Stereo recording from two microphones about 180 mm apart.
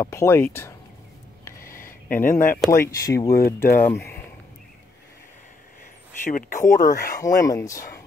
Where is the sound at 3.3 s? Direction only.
55° left (ahead or behind).